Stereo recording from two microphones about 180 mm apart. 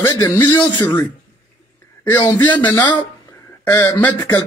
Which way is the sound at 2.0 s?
25° left (ahead or behind).